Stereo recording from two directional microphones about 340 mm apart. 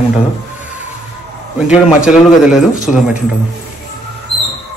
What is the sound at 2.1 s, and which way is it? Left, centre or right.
Speech, centre.